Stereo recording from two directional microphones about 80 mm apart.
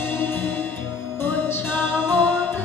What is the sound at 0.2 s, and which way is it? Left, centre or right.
Music, left.